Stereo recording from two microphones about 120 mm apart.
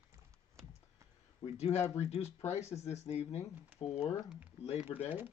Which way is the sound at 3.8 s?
45° left (ahead or behind).